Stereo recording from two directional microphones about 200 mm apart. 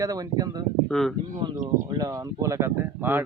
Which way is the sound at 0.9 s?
Centre (ahead or behind).